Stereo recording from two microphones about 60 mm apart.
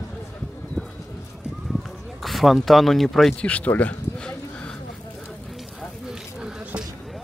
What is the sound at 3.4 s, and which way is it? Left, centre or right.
Speech, left.